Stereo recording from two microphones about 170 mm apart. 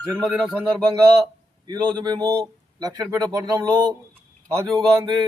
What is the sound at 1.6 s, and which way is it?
A man's voice, 25° right (ahead or behind).